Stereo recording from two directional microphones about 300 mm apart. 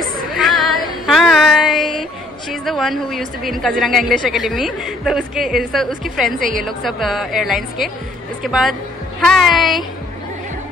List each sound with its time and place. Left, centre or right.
0.4 s female singing: centre
2.5 s a woman's voice: centre
6.3 s a woman's voice: right
6.6 s a woman's voice: centre